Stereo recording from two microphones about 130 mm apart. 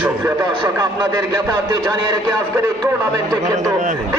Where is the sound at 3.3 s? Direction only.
25° right (ahead or behind).